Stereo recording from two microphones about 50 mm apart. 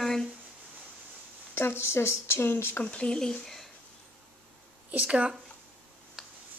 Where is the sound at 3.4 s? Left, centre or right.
Centre.